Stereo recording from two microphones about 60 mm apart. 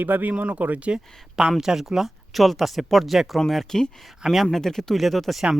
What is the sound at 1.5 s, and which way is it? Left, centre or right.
Speech, centre.